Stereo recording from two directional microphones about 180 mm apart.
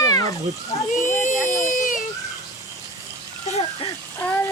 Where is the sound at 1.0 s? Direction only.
45° left (ahead or behind).